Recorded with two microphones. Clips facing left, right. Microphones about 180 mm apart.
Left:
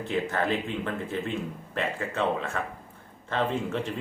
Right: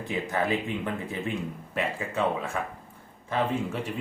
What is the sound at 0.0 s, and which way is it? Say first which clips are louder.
Speech: left 1 dB; 10° right (ahead or behind).